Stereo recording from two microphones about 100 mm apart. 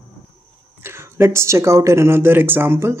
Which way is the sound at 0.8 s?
25° right (ahead or behind).